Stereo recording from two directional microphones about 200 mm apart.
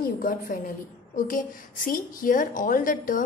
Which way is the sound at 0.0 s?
40° left (ahead or behind).